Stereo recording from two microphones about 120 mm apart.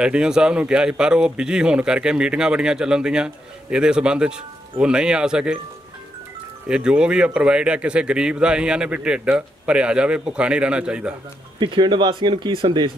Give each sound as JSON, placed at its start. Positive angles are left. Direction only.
{"t": 0.0, "sound": "speech", "side_deg": -5}
{"t": 6.7, "sound": "speech", "side_deg": -5}
{"t": 11.6, "sound": "speech", "side_deg": -40}